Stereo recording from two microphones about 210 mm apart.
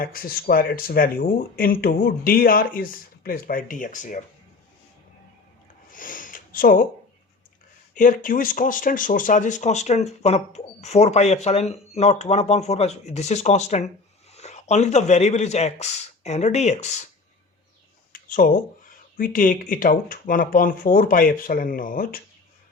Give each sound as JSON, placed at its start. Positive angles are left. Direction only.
{"t": 0.0, "sound": "speech", "side_deg": 45}
{"t": 5.9, "sound": "a sound", "side_deg": 40}
{"t": 7.9, "sound": "speech", "side_deg": 40}
{"t": 18.1, "sound": "speech", "side_deg": 40}